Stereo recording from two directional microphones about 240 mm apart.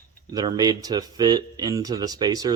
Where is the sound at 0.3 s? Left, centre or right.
Centre.